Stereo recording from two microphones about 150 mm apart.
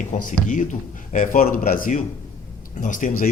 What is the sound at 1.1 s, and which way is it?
A man's voice, 70° left (ahead or behind).